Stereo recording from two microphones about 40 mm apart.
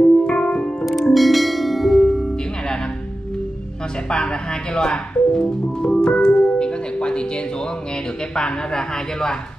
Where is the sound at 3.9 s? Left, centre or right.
Left.